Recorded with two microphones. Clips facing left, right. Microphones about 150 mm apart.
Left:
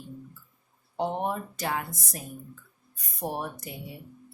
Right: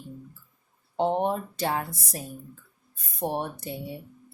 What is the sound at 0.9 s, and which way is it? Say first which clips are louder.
Speech: right 4 dB; 30° right (ahead or behind).